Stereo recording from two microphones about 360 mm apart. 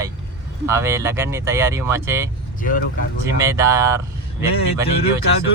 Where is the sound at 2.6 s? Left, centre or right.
Left.